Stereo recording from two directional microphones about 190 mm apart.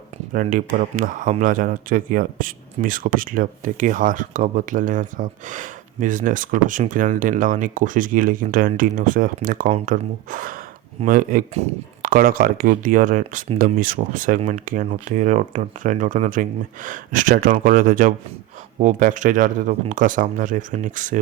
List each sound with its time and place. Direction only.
0.3 s speech: 45° right (ahead or behind)